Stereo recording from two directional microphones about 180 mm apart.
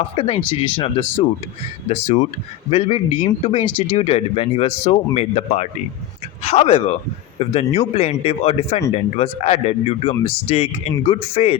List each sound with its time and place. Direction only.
0.2 s speech: 30° left (ahead or behind)